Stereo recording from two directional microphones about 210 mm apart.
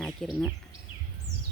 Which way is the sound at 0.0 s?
Centre (ahead or behind).